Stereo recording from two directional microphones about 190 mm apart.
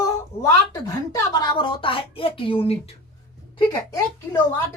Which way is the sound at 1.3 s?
20° left (ahead or behind).